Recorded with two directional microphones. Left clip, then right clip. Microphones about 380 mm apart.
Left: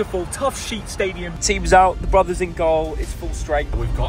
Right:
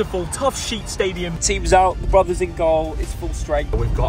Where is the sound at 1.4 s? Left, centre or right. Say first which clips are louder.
Left 2 dB; centre.